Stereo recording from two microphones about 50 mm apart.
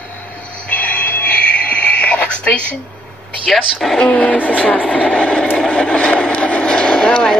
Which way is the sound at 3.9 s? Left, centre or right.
Left.